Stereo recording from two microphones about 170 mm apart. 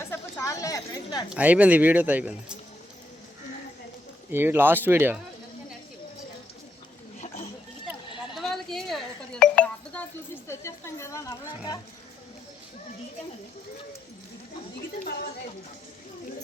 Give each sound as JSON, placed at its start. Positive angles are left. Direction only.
{"t": 0.0, "sound": "a sound", "side_deg": 15}
{"t": 1.3, "sound": "speech", "side_deg": -10}
{"t": 4.3, "sound": "speech", "side_deg": -15}
{"t": 8.4, "sound": "telephone dialing", "side_deg": 0}
{"t": 10.5, "sound": "speech", "side_deg": 15}